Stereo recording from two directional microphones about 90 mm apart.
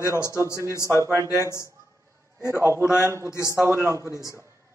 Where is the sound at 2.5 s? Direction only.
30° right (ahead or behind).